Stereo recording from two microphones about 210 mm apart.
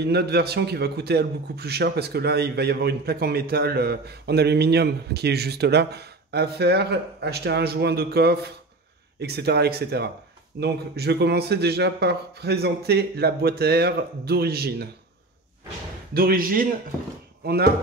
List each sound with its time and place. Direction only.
0.0 s a man's voice: 50° right (ahead or behind)
16.1 s a man's voice: 45° right (ahead or behind)